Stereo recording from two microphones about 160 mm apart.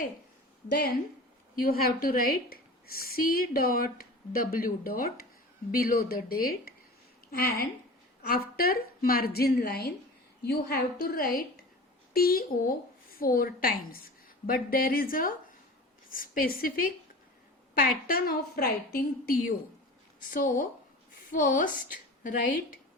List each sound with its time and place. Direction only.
1.5 s a woman's voice: 65° left (ahead or behind)
10.4 s a woman's voice: 90° left; by 22.4 s 55° left (ahead or behind)